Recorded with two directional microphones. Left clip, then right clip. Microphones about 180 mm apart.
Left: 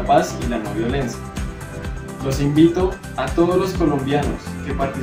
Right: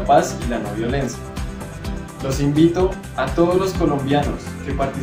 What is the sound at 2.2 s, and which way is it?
A man's voice, centre (ahead or behind).